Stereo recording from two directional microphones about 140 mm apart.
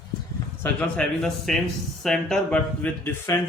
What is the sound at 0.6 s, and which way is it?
Speech, 10° left (ahead or behind).